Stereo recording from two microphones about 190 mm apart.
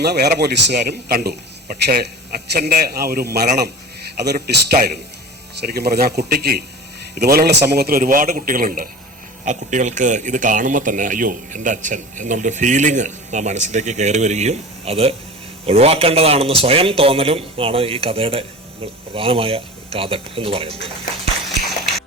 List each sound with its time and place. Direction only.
0.0 s a man's voice: 60° right (ahead or behind); by 20.9 s 30° right (ahead or behind)